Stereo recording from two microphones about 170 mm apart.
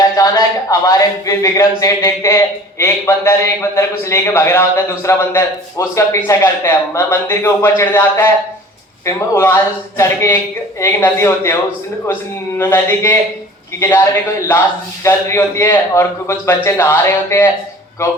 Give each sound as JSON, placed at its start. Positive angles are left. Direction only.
{"t": 0.2, "sound": "speech", "side_deg": 20}
{"t": 12.5, "sound": "speech", "side_deg": 15}